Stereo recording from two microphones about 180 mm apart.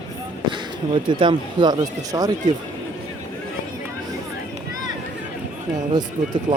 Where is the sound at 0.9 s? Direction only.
25° right (ahead or behind).